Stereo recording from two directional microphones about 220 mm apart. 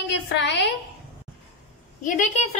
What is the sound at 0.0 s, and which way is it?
Speech, 50° left (ahead or behind).